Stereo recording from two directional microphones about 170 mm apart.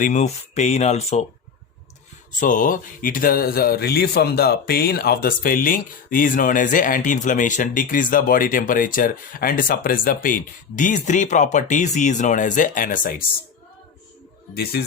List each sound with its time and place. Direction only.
0.0 s speech: 45° left (ahead or behind)
2.4 s speech: 50° left (ahead or behind)
14.5 s speech: 70° left (ahead or behind)